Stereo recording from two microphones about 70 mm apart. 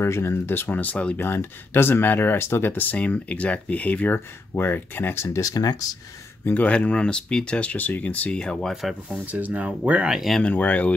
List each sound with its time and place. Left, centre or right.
0.0 s speech: left
1.1 s speech: left
6.4 s speech: left
9.2 s speech: right
10.1 s speech: centre
10.4 s speech: left